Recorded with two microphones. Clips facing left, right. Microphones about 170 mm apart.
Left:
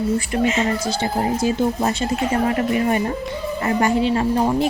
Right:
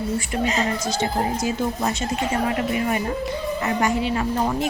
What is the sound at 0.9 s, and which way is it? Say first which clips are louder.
Speech: left 2 dB; 30° left (ahead or behind).